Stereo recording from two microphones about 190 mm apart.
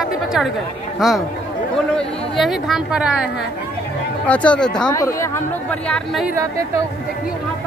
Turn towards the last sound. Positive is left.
turn(degrees=-15)  # may be behind; listen again after turning